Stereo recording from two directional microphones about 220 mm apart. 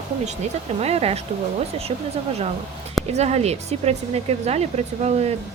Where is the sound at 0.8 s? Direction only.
30° right (ahead or behind).